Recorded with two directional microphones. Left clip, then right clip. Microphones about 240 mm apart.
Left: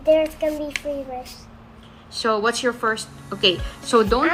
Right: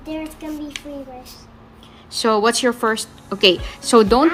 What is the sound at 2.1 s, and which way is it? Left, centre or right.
A woman's voice, right.